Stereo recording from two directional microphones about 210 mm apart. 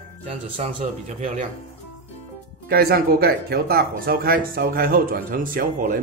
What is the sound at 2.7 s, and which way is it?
Speech, 45° right (ahead or behind).